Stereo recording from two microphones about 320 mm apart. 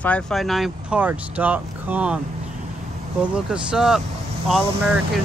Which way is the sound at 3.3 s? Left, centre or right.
Centre.